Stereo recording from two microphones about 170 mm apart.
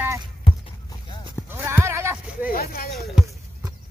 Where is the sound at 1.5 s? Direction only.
15° right (ahead or behind).